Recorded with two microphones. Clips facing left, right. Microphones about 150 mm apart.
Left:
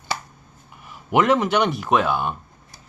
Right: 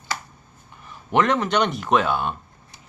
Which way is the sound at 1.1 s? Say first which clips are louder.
Left 2 dB; 10° left (ahead or behind).